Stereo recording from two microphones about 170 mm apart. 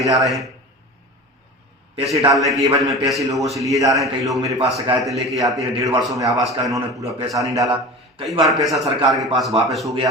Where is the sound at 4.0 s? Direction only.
Centre (ahead or behind).